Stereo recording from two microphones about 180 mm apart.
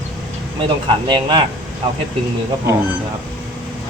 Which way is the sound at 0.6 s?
25° right (ahead or behind).